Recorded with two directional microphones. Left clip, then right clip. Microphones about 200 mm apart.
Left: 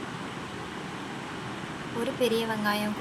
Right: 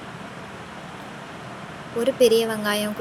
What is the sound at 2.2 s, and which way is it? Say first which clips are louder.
Speech: right 9 dB; 25° right (ahead or behind).